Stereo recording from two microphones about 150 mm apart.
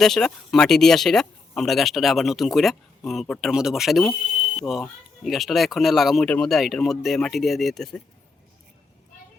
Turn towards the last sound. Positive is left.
turn(degrees=0)  # may be behind; listen again after turning